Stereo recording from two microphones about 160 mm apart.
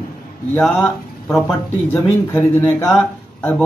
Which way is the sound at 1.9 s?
10° left (ahead or behind).